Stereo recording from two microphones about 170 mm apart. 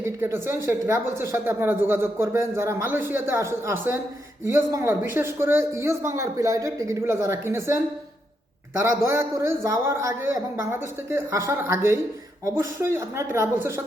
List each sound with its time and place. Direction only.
0.0 s speech: 15° right (ahead or behind)
8.8 s speech: 15° right (ahead or behind)